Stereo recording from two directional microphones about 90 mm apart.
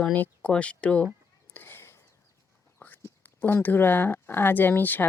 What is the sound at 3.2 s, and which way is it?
Speech, 25° left (ahead or behind).